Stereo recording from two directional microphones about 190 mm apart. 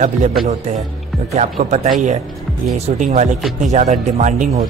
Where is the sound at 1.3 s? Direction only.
35° right (ahead or behind).